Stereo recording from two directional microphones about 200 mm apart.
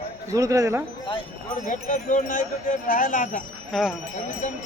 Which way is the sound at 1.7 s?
40° left (ahead or behind).